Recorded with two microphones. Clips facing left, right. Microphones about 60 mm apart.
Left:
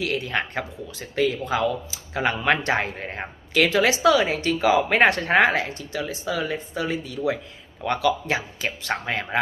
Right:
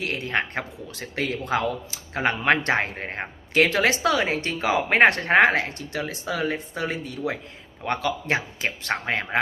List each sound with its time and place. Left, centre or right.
0.0 s speech: right
0.9 s speech: right
3.5 s speech: right